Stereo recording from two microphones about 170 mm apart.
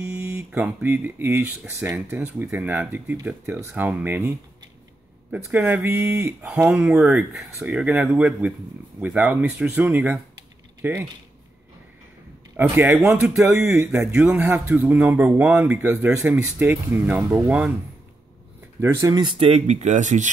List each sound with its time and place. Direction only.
0.0 s speech: 15° right (ahead or behind)
5.3 s speech: 10° right (ahead or behind)
12.5 s speech: 10° right (ahead or behind)
18.8 s speech: 20° right (ahead or behind); by 20.2 s 45° right (ahead or behind)